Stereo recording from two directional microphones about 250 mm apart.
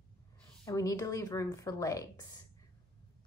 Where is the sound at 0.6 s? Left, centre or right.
Centre.